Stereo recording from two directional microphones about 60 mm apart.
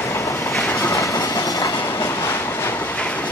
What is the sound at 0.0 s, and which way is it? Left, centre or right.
Train, left.